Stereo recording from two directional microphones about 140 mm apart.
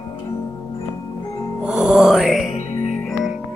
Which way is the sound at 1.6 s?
5° right (ahead or behind).